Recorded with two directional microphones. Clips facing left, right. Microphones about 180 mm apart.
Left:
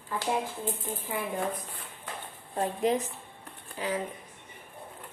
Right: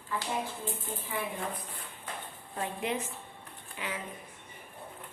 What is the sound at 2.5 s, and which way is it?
Speech, 35° left (ahead or behind).